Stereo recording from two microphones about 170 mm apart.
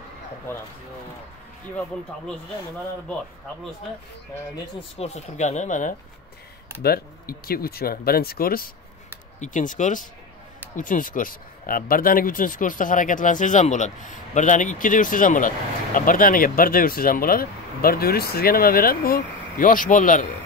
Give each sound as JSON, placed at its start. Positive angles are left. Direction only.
{"t": 4.9, "sound": "speech", "side_deg": 40}
{"t": 6.8, "sound": "speech", "side_deg": 65}
{"t": 9.4, "sound": "speech", "side_deg": 50}